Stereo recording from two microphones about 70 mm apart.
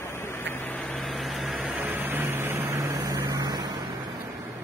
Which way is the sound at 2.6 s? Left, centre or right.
Right.